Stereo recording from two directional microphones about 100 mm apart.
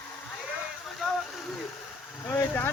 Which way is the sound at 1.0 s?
10° right (ahead or behind).